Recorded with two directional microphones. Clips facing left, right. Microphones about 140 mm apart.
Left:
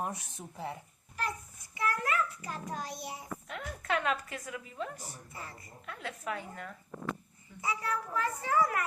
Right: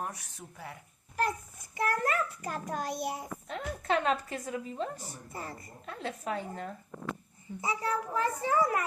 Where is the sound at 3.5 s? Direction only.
30° right (ahead or behind).